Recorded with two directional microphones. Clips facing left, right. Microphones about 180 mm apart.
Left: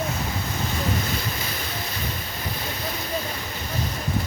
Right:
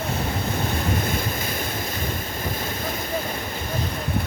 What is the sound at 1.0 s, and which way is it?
Waves, 50° right (ahead or behind).